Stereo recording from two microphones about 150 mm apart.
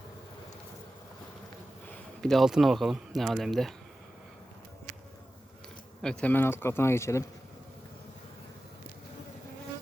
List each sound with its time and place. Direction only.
2.2 s speech: centre (ahead or behind)
6.0 s speech: 5° left (ahead or behind)